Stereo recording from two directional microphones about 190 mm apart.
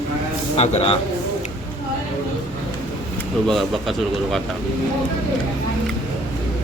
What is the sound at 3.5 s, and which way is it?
Speech, centre (ahead or behind).